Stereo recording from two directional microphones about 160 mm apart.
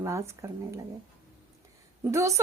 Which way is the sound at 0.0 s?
20° right (ahead or behind).